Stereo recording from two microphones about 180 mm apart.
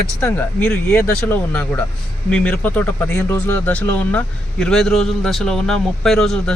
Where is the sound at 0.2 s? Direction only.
10° left (ahead or behind).